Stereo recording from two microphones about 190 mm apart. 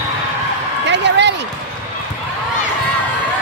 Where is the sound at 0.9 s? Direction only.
65° right (ahead or behind).